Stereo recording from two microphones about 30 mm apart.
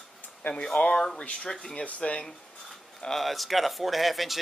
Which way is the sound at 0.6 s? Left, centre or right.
Left.